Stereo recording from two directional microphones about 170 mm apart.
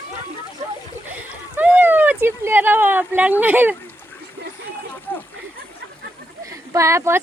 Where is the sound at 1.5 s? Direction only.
10° right (ahead or behind).